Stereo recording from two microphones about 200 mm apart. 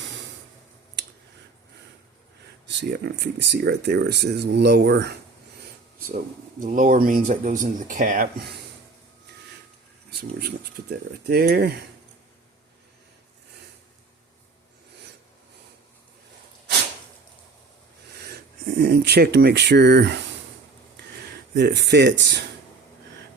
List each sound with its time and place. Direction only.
2.6 s speech: 55° right (ahead or behind)
6.6 s speech: 40° right (ahead or behind)
10.1 s speech: 55° right (ahead or behind)
18.8 s speech: 55° right (ahead or behind)
21.5 s speech: 60° right (ahead or behind)